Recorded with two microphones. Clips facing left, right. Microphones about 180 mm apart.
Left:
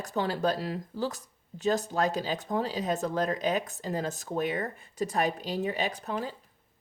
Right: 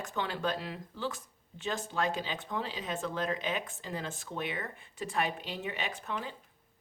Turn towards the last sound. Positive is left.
turn(degrees=40)  # may be behind; listen again after turning